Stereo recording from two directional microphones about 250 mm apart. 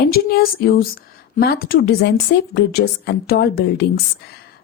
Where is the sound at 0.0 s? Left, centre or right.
Left.